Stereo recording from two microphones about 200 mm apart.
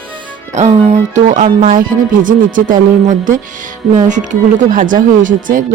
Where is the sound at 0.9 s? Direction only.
35° right (ahead or behind).